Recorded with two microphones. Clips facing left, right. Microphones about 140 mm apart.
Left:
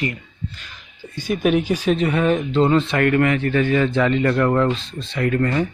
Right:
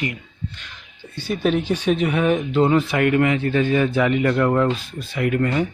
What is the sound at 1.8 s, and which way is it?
Speech, 5° right (ahead or behind).